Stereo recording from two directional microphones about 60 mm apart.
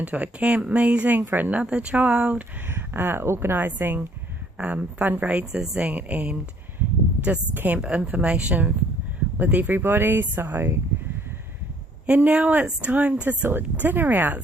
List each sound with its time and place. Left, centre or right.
0.0 s speech: right
2.6 s speech: right
5.5 s speech: centre; by 10.8 s right
12.0 s speech: right